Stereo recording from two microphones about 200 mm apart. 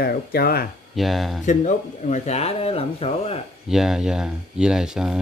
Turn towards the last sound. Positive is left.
turn(degrees=-5)  # may be behind; listen again after turning